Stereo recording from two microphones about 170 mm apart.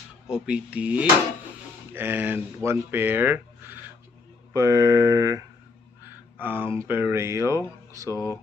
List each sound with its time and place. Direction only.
0.3 s speech: 5° right (ahead or behind)
6.0 s a sound: 10° right (ahead or behind)
6.8 s speech: 15° right (ahead or behind)
8.1 s speech: 20° left (ahead or behind)